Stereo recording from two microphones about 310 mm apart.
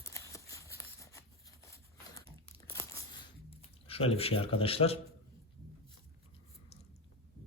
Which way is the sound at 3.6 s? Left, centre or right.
Centre.